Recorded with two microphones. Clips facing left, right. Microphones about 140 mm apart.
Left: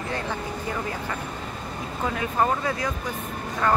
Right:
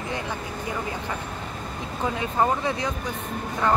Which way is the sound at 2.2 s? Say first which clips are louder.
Even; 20° right (ahead or behind).